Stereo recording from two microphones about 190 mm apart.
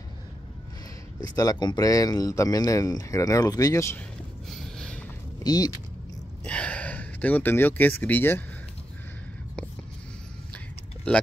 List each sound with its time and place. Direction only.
1.2 s speech: 20° left (ahead or behind)
4.5 s a sound: 5° left (ahead or behind)
5.4 s speech: 20° left (ahead or behind)
6.4 s speech: 5° left (ahead or behind)
11.1 s speech: 5° left (ahead or behind)